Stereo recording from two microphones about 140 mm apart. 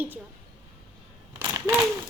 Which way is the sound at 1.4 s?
20° right (ahead or behind).